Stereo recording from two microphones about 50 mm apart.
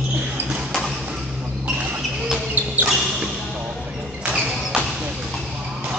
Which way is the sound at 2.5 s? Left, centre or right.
Right.